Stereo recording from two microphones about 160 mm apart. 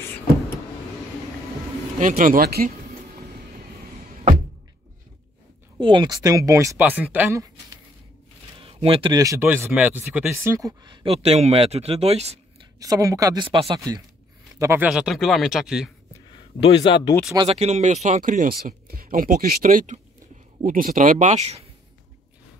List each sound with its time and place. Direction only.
2.0 s speech: 55° right (ahead or behind)
5.8 s speech: 30° right (ahead or behind)
8.5 s speech: 35° right (ahead or behind); by 10.3 s 5° right (ahead or behind)
10.3 s speech: 20° right (ahead or behind)
11.1 s speech: 40° right (ahead or behind)
12.7 s speech: 20° right (ahead or behind)
14.9 s speech: 5° right (ahead or behind)
16.1 s a sound: 30° left (ahead or behind)
17.0 s speech: 20° left (ahead or behind)
17.5 s speech: 40° right (ahead or behind)